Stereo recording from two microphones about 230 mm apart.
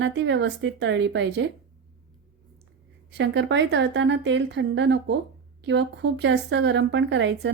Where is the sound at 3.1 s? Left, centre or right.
Right.